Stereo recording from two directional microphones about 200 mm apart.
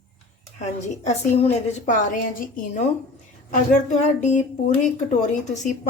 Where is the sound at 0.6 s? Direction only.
35° left (ahead or behind).